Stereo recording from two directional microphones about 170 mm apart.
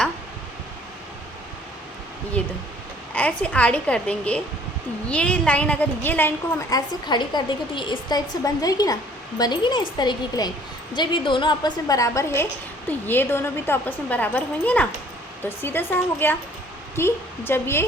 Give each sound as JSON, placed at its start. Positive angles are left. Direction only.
{"t": 2.4, "sound": "a woman's voice", "side_deg": 5}